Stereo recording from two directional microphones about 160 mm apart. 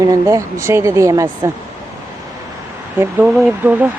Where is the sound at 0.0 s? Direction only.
20° right (ahead or behind).